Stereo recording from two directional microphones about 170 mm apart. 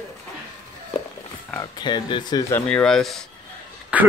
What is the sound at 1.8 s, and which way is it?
Speech, 25° left (ahead or behind).